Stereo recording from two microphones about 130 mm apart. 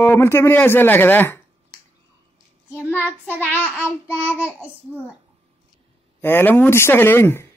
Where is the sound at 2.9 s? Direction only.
15° left (ahead or behind).